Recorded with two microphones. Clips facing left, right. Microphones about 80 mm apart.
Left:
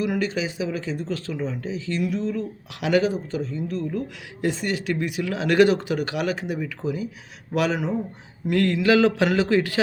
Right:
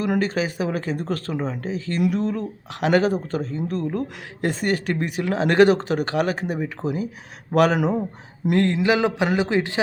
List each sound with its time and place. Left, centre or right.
0.0 s speech: right
8.5 s a man's voice: right